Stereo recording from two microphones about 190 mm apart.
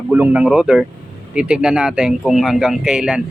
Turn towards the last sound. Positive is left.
turn(degrees=-5)  # may be behind; listen again after turning